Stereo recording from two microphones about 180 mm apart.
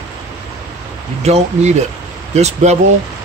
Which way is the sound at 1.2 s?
35° right (ahead or behind).